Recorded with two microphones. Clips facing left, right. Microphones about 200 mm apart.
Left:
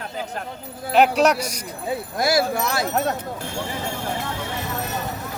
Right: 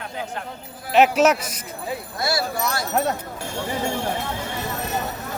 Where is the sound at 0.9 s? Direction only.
5° right (ahead or behind).